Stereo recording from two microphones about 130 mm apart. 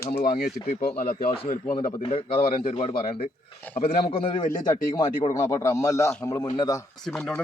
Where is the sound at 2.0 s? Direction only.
45° left (ahead or behind).